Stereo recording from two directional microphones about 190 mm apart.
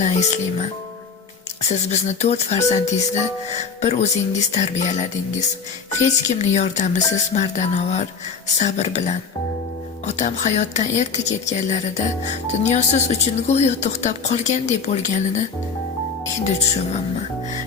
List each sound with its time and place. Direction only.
0.0 s speech: 35° left (ahead or behind)
1.9 s speech: 35° left (ahead or behind)
6.2 s speech: 35° left (ahead or behind)
16.4 s speech: 35° left (ahead or behind)